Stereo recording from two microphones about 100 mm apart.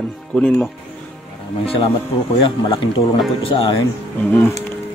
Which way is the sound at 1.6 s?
70° left (ahead or behind).